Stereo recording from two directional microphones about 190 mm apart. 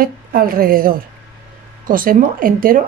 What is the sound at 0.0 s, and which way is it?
Speech, 50° right (ahead or behind).